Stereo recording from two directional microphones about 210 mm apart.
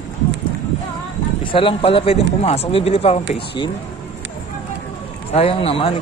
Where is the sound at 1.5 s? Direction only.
25° left (ahead or behind).